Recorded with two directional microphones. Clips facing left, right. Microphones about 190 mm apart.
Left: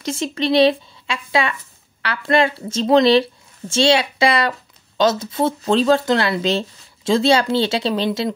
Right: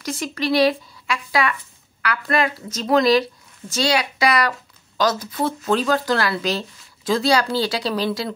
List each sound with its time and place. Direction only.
0.0 s a woman's voice: 25° left (ahead or behind)